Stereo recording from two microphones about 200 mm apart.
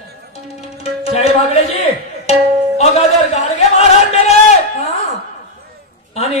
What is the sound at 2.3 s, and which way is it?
Music, 30° left (ahead or behind).